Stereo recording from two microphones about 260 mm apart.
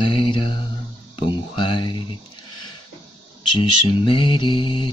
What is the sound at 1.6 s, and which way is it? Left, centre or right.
Mantra, centre.